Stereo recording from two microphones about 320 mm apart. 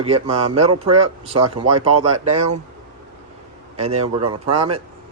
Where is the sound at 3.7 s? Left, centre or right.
Centre.